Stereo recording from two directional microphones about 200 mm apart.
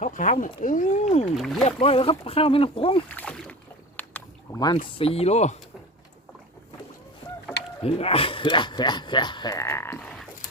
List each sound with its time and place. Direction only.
0.0 s speech: 40° left (ahead or behind)
3.2 s speech: 5° left (ahead or behind)
3.9 s boat: 10° left (ahead or behind)
4.9 s speech: 30° left (ahead or behind)
7.8 s speech: 30° left (ahead or behind); by 10.2 s 5° left (ahead or behind)